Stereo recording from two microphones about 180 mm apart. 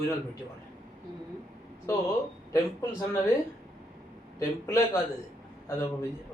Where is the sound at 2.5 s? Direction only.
15° left (ahead or behind).